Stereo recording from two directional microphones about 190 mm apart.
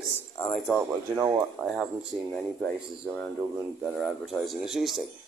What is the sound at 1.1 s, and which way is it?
Speech, 15° right (ahead or behind).